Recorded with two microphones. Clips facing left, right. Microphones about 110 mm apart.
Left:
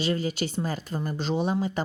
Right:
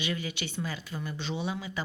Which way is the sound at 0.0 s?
40° left (ahead or behind).